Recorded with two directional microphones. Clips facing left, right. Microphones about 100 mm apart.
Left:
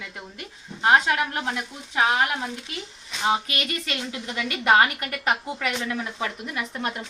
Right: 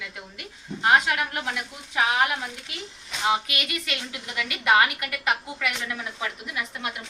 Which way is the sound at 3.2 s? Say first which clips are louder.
Left 1 dB; 35° left (ahead or behind).